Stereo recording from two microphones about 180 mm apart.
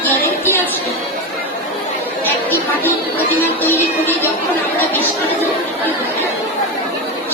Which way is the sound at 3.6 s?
10° left (ahead or behind).